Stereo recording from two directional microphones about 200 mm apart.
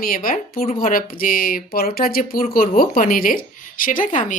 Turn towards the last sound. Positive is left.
turn(degrees=40)  # may be behind; listen again after turning